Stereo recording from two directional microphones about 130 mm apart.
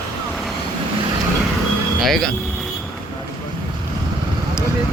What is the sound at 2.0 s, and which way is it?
Speech, centre (ahead or behind).